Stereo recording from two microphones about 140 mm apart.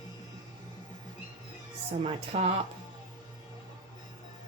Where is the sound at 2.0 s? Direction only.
55° right (ahead or behind).